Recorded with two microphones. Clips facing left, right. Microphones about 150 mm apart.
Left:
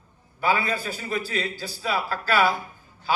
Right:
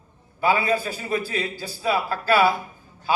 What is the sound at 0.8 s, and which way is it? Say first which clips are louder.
A man's voice: right 3 dB; 45° right (ahead or behind).